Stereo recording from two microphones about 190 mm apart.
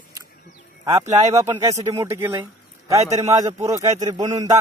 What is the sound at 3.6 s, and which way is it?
Speech, 20° right (ahead or behind).